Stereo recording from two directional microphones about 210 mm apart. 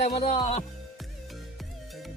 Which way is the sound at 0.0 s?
30° left (ahead or behind).